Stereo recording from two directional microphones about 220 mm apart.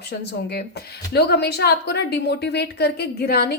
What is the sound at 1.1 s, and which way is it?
A woman's voice, 50° left (ahead or behind).